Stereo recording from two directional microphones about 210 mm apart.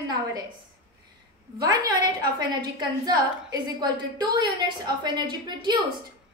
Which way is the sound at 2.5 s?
20° right (ahead or behind).